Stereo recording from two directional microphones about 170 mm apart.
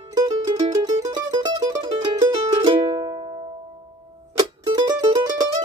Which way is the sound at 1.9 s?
25° right (ahead or behind).